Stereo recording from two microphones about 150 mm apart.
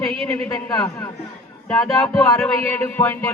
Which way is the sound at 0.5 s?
20° left (ahead or behind).